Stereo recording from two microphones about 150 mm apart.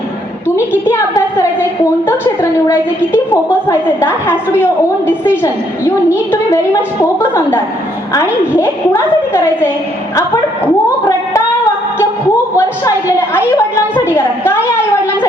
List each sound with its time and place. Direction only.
0.9 s a woman's voice: 20° left (ahead or behind)
12.5 s a woman's voice: 15° left (ahead or behind)